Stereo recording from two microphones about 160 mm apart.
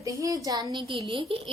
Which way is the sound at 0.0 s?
20° right (ahead or behind).